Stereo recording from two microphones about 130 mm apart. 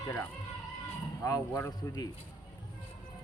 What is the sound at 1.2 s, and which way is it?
Speech, 25° left (ahead or behind).